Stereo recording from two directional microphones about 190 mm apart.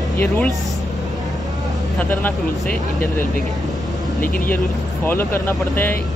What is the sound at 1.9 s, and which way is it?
Speech, 10° left (ahead or behind).